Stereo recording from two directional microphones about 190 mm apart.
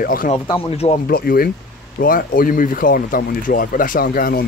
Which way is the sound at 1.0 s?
50° left (ahead or behind).